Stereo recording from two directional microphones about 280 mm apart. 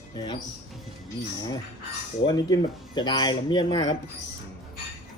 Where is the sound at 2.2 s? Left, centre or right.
Centre.